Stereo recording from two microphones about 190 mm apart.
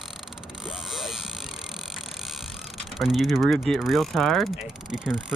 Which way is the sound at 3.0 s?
Centre (ahead or behind).